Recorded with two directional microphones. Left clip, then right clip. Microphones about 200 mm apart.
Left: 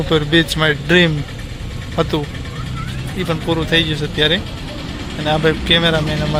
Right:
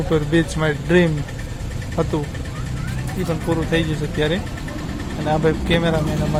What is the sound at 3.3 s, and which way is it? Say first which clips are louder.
Speech: left 5 dB; centre (ahead or behind).